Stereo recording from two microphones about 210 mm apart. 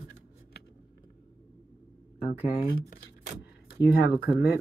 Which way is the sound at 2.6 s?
45° left (ahead or behind).